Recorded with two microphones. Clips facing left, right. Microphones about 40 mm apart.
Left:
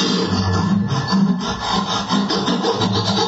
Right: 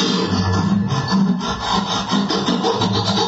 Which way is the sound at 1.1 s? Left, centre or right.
Centre.